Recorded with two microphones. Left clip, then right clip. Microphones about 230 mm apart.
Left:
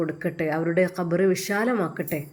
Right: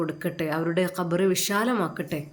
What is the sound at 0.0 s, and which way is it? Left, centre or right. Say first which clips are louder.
A woman's voice: left 2 dB; centre.